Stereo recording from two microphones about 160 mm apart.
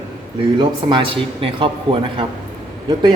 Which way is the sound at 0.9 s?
30° right (ahead or behind).